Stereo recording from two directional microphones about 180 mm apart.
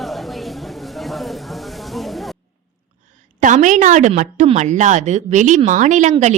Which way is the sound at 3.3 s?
45° right (ahead or behind).